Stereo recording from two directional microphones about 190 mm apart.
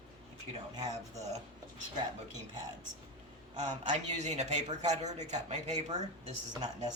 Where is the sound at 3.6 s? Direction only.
35° right (ahead or behind).